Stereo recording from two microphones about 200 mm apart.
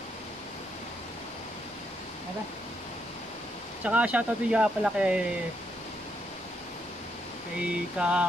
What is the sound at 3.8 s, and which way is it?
Speech, 5° right (ahead or behind).